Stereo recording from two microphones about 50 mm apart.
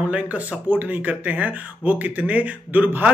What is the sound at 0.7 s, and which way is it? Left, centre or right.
Speech, right.